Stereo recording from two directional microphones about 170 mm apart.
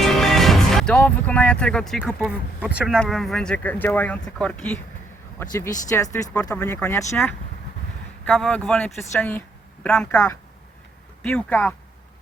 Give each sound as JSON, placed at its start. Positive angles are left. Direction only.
{"t": 0.0, "sound": "speech", "side_deg": 0}
{"t": 2.2, "sound": "speech", "side_deg": -5}
{"t": 5.4, "sound": "speech", "side_deg": 15}
{"t": 8.2, "sound": "speech", "side_deg": 5}